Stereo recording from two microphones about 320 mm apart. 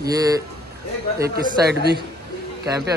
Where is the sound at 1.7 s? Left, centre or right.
Right.